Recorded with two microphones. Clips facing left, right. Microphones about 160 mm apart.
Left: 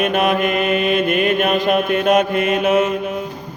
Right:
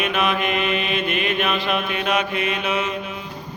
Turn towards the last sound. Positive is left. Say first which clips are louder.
# left 8 dB
turn(degrees=45)  # may be behind; listen again after turning